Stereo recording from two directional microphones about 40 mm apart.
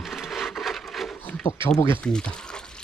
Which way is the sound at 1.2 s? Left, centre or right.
Left.